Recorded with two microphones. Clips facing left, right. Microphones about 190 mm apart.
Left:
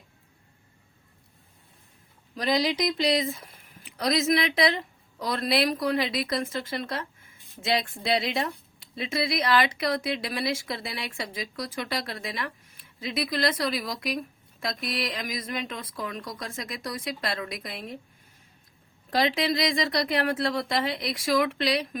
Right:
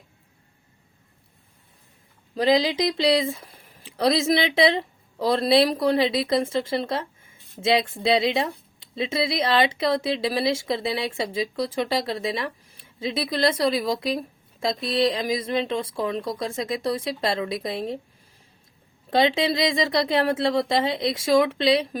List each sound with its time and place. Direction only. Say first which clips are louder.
2.3 s speech: right 5 dB; 25° right (ahead or behind)
19.1 s speech: right 4 dB; 25° right (ahead or behind)